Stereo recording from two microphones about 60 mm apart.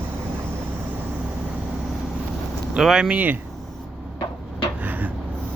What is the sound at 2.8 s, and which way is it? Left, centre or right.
Speech, centre.